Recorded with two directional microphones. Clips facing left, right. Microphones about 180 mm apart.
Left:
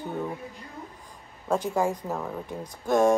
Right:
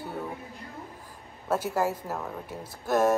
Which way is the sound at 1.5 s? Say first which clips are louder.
Left 2 dB; 5° right (ahead or behind).